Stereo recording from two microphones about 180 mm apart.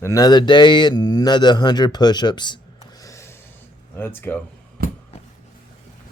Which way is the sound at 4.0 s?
10° left (ahead or behind).